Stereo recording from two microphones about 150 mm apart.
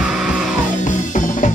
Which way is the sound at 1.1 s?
60° left (ahead or behind).